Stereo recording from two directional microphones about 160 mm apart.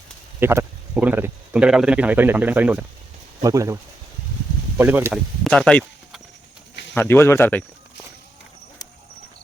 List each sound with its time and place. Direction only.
0.3 s speech: 15° right (ahead or behind)
4.8 s speech: 10° right (ahead or behind)
5.1 s speech: 5° left (ahead or behind)